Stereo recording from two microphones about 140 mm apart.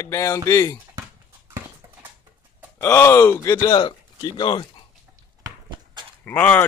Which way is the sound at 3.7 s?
30° left (ahead or behind).